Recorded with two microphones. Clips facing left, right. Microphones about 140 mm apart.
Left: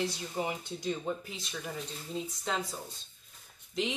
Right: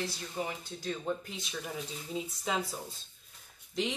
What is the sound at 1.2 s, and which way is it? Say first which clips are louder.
Speech: even; centre (ahead or behind).